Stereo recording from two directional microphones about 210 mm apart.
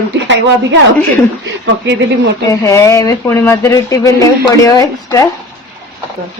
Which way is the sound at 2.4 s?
15° left (ahead or behind).